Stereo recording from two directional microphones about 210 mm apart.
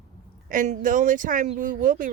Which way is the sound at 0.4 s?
40° right (ahead or behind).